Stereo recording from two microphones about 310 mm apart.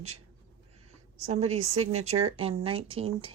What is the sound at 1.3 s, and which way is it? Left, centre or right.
Speech, right.